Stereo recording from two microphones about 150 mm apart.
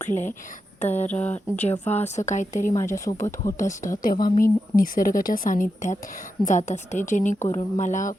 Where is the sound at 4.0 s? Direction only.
70° left (ahead or behind).